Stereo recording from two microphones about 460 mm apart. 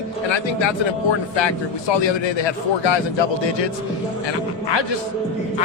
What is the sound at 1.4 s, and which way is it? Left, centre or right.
A man's voice, left.